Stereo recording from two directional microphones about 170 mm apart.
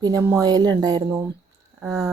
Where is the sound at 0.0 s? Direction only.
15° right (ahead or behind).